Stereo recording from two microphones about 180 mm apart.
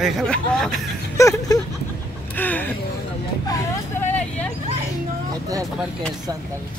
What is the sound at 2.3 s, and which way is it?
Speech, 10° left (ahead or behind).